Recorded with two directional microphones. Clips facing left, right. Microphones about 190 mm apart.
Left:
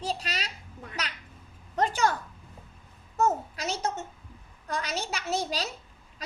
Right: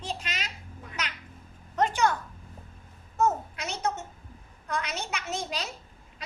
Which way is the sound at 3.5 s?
35° left (ahead or behind).